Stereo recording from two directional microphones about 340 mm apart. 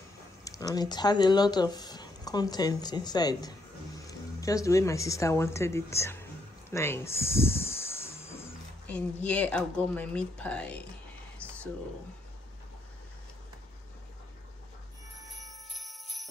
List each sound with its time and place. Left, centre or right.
0.4 s speech: centre
15.2 s jingle bell: centre